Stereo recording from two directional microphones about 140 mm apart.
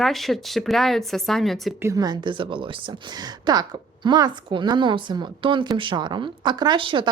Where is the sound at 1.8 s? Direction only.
25° right (ahead or behind).